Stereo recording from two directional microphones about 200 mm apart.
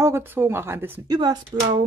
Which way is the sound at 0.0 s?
10° right (ahead or behind).